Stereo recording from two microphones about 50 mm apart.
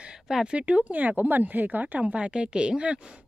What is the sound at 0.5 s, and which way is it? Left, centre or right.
Speech, right.